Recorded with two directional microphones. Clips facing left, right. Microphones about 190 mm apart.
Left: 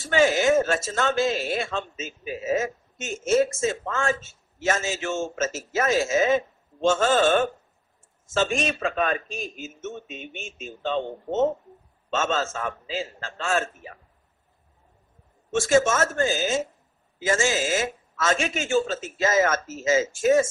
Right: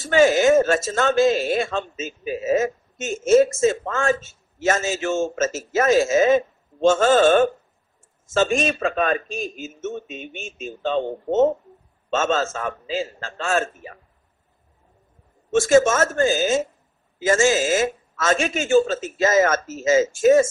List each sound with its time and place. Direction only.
0.0 s speech: 45° right (ahead or behind)
12.1 s speech: 45° right (ahead or behind)
15.5 s speech: 45° right (ahead or behind)